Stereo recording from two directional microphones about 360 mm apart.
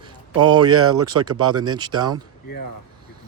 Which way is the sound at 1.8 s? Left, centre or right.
Centre.